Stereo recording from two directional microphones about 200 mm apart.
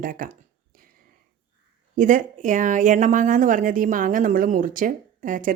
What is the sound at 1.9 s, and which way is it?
Speech, 40° right (ahead or behind).